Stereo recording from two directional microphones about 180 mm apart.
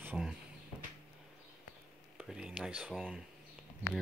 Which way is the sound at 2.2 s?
5° right (ahead or behind).